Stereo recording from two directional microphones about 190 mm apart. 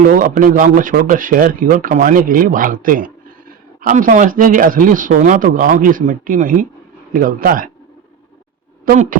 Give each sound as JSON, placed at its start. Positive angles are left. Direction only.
{"t": 0.1, "sound": "speech", "side_deg": -45}
{"t": 8.9, "sound": "speech", "side_deg": -45}